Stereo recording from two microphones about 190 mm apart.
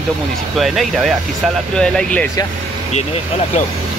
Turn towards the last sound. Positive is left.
turn(degrees=35)  # may be behind; listen again after turning